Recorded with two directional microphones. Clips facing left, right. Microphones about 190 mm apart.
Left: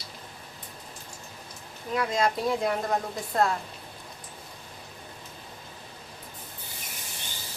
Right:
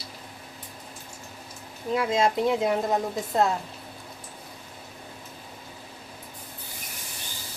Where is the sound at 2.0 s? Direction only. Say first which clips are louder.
Right 3 dB; 25° right (ahead or behind).